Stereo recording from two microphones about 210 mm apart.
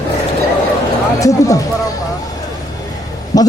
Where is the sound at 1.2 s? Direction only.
15° left (ahead or behind).